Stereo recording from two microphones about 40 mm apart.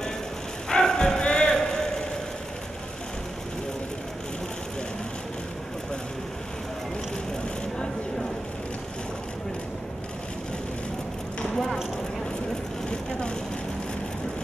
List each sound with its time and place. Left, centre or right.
0.7 s music: centre
1.2 s a sound: left
11.5 s clip-clop: centre